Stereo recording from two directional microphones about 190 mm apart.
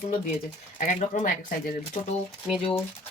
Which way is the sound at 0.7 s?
40° left (ahead or behind).